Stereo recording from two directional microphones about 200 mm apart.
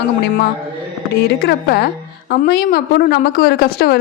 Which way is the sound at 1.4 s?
55° left (ahead or behind).